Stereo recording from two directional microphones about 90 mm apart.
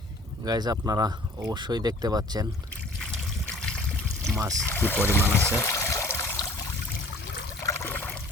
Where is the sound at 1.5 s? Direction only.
50° right (ahead or behind).